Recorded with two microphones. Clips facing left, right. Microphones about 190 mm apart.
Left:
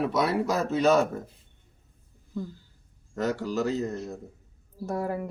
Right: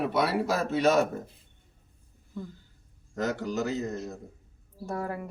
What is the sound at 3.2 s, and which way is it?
Speech, 35° left (ahead or behind).